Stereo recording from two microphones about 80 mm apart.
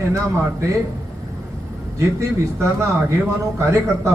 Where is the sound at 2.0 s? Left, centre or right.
Right.